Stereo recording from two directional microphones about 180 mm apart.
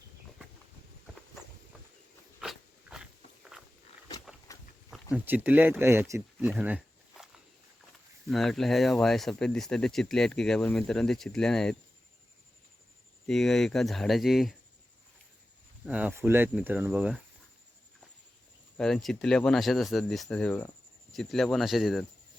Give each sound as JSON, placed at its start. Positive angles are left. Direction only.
{"t": 2.4, "sound": "dog", "side_deg": -5}
{"t": 4.5, "sound": "pig", "side_deg": 20}
{"t": 5.1, "sound": "speech", "side_deg": -10}
{"t": 13.2, "sound": "speech", "side_deg": 0}
{"t": 15.9, "sound": "speech", "side_deg": -5}
{"t": 18.8, "sound": "speech", "side_deg": 0}